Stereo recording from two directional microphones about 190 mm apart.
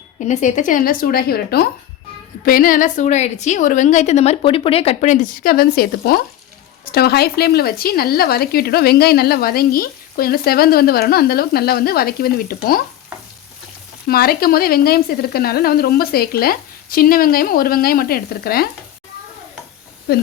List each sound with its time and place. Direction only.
0.3 s a woman's voice: 40° left (ahead or behind)
14.1 s speech: 55° left (ahead or behind)
20.1 s speech: 55° left (ahead or behind)